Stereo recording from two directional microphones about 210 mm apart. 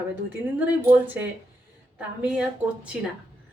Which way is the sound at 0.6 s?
10° right (ahead or behind).